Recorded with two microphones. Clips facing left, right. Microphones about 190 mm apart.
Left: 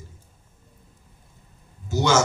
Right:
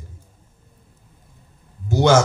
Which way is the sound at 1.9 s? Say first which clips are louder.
Right 6 dB; 60° right (ahead or behind).